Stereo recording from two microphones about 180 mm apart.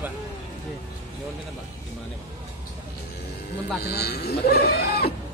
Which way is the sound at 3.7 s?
65° left (ahead or behind).